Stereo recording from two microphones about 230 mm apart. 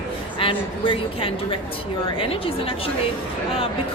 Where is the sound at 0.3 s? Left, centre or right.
Left.